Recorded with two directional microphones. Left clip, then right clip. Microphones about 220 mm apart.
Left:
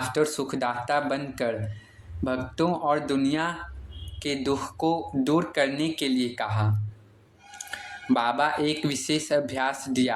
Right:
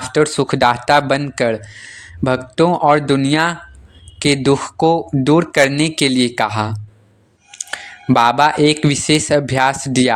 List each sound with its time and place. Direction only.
0.1 s speech: 35° right (ahead or behind)